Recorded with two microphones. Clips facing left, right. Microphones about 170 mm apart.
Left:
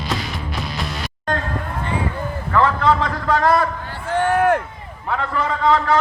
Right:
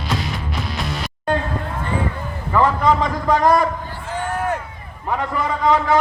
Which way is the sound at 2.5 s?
10° right (ahead or behind).